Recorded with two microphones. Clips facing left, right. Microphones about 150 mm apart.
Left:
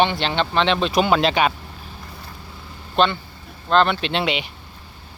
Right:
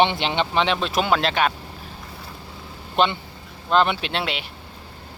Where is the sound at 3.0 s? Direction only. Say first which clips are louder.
Left 2 dB; 15° right (ahead or behind).